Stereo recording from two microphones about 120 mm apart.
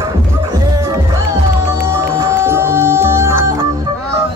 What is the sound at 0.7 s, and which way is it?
Music, 30° right (ahead or behind).